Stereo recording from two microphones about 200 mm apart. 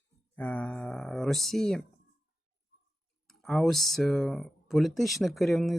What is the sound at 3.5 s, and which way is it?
Speech, centre (ahead or behind).